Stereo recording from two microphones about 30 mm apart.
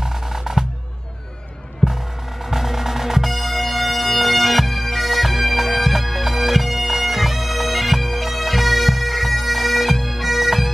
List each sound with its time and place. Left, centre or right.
0.0 s music: centre
2.5 s music: centre
3.3 s bagpipes: centre